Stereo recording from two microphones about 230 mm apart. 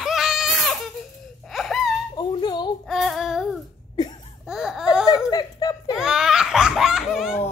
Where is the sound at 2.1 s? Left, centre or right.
Centre.